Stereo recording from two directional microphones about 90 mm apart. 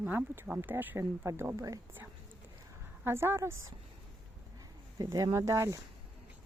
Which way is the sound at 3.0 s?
25° right (ahead or behind).